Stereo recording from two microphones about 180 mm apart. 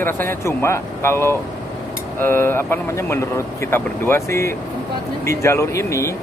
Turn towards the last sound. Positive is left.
turn(degrees=15)  # may be behind; listen again after turning